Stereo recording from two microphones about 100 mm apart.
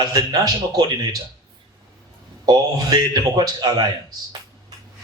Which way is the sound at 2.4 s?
40° right (ahead or behind).